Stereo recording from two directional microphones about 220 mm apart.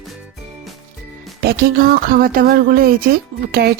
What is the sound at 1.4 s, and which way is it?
Speech, 45° right (ahead or behind).